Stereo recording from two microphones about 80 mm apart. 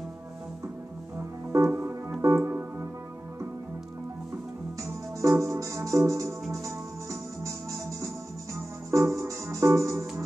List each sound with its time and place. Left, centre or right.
1.6 s music: right
2.2 s organ: right
4.8 s music: right